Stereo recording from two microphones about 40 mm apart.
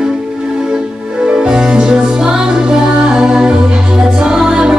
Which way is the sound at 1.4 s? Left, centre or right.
Right.